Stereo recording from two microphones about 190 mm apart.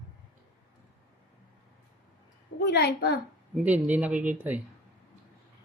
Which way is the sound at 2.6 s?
60° left (ahead or behind).